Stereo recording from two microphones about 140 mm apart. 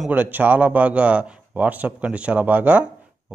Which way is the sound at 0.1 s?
10° right (ahead or behind).